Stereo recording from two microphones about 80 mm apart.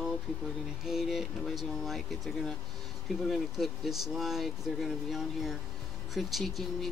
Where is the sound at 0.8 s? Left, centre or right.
Centre.